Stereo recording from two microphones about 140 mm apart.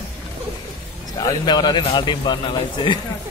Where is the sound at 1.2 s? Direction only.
30° left (ahead or behind).